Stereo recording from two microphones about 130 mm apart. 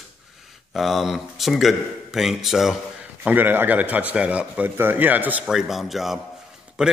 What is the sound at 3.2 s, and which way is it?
A man's voice, 15° right (ahead or behind).